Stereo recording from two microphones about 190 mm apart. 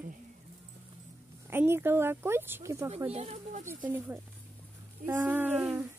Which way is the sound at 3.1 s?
35° right (ahead or behind).